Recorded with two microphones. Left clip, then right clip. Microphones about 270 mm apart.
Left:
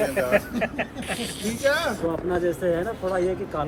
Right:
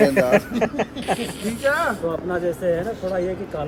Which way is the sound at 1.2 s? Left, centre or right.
Right.